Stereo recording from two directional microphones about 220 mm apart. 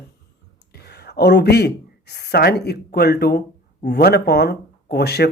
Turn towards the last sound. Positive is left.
turn(degrees=50)  # may be behind; listen again after turning